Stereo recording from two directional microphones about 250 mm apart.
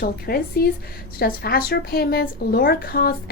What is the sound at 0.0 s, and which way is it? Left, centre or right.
Speech, left.